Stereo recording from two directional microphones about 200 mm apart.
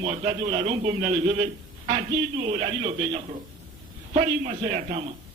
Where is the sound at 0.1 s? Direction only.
30° right (ahead or behind).